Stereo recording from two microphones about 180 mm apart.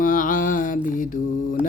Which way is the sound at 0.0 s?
50° left (ahead or behind).